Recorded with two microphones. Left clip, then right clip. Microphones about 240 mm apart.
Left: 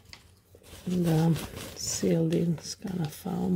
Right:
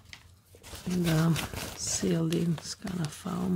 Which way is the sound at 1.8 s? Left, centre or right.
Centre.